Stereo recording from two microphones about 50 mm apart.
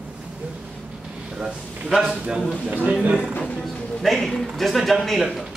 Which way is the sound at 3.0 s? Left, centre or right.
Right.